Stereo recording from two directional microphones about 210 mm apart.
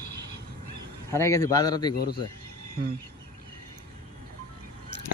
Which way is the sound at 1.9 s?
50° left (ahead or behind).